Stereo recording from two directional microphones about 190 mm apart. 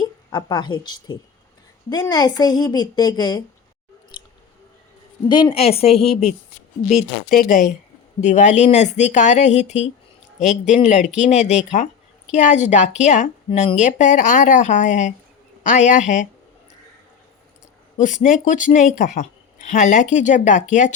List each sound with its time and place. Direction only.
0.0 s a woman's voice: 20° left (ahead or behind)
4.1 s chewing: 25° left (ahead or behind)
5.3 s speech: 25° left (ahead or behind)
6.8 s speech: 45° left (ahead or behind)
11.0 s speech: 5° right (ahead or behind)
11.3 s speech: 35° left (ahead or behind)
17.9 s speech: 40° left (ahead or behind)